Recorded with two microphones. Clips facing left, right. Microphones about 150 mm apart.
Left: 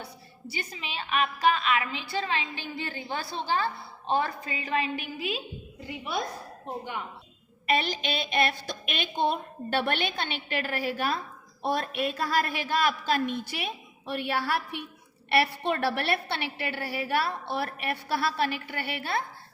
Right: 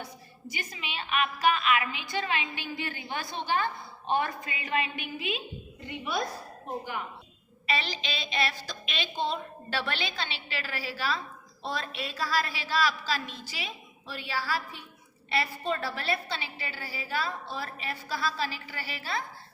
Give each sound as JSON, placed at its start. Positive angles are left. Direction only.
{"t": 0.5, "sound": "a woman's voice", "side_deg": 35}
{"t": 5.9, "sound": "a woman's voice", "side_deg": 5}
{"t": 7.7, "sound": "a woman's voice", "side_deg": 50}